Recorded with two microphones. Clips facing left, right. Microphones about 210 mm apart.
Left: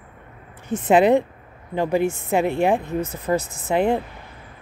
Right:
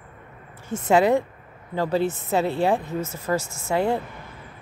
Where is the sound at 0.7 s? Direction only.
20° left (ahead or behind).